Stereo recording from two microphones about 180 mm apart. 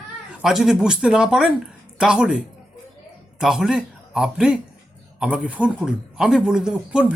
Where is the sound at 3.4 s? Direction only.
5° right (ahead or behind).